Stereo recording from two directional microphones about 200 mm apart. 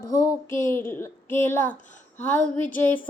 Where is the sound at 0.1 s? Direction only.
15° left (ahead or behind).